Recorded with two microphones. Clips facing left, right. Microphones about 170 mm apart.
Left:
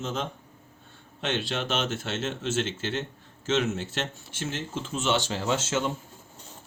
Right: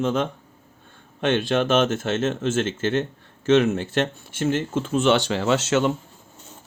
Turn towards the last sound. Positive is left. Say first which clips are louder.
# right 7 dB
turn(degrees=-70)  # may be behind; listen again after turning